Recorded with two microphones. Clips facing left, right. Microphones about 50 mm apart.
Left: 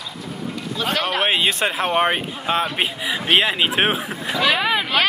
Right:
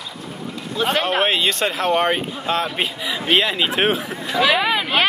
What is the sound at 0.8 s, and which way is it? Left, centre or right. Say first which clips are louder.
Speech: right 3 dB; right.